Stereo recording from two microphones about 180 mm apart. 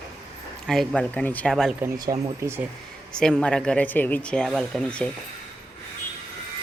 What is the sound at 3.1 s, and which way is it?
Speech, 5° left (ahead or behind).